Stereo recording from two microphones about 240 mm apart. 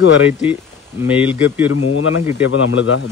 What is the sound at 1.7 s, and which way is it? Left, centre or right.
Speech, left.